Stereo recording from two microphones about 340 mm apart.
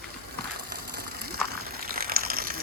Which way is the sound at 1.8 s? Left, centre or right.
Right.